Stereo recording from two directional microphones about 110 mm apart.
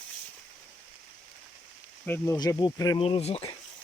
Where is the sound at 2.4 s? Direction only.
35° left (ahead or behind).